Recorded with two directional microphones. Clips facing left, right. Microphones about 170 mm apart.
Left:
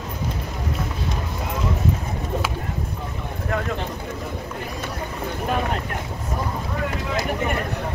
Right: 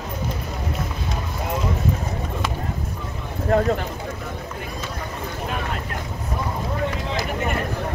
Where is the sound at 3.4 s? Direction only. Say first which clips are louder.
Right 8 dB; 35° right (ahead or behind).